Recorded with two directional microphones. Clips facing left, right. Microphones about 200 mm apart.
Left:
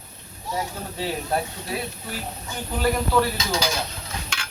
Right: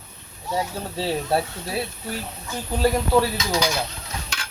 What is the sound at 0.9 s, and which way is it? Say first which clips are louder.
Speech: right 3 dB; 30° right (ahead or behind).